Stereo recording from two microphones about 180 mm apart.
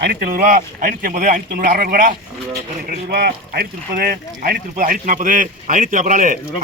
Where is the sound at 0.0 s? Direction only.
60° right (ahead or behind).